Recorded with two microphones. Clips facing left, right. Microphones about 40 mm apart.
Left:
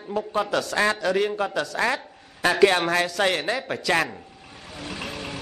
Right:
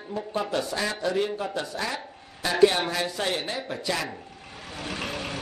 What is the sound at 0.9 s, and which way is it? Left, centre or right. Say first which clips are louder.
A man's voice: left 4 dB; left.